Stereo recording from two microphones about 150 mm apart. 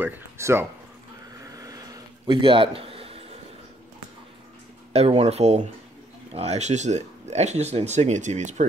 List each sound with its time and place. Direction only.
0.0 s speech: 15° right (ahead or behind)
1.3 s a sound: 25° right (ahead or behind); by 3.3 s 40° right (ahead or behind)
4.9 s speech: 45° right (ahead or behind)